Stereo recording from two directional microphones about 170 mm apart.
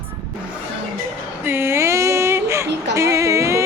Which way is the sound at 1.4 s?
15° right (ahead or behind).